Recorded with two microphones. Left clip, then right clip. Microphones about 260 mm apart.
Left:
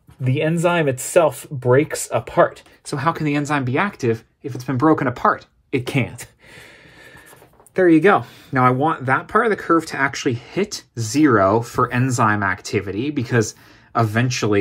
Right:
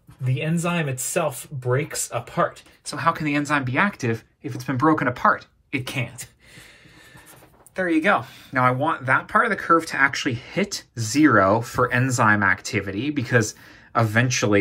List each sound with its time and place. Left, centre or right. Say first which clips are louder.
0.2 s speech: left 8 dB; left
7.7 s speech: left 6 dB; left